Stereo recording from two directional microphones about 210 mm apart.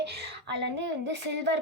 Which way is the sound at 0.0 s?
50° right (ahead or behind).